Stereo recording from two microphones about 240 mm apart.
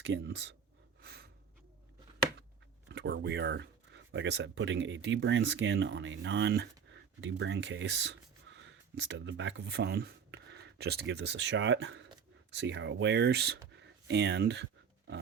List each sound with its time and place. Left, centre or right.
0.0 s speech: right
1.0 s gasp: right
2.9 s speech: right
8.5 s a sound: right
9.0 s speech: right